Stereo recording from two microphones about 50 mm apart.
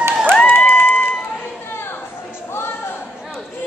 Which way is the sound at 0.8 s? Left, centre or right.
Left.